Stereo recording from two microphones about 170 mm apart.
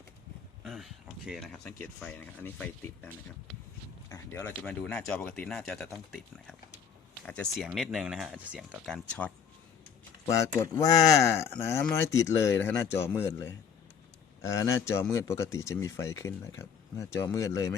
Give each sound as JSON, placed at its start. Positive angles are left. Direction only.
{"t": 0.6, "sound": "speech", "side_deg": 0}
{"t": 4.1, "sound": "speech", "side_deg": 15}
{"t": 10.6, "sound": "speech", "side_deg": 20}